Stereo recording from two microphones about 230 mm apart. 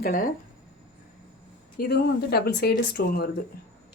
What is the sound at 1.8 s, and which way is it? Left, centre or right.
Speech, left.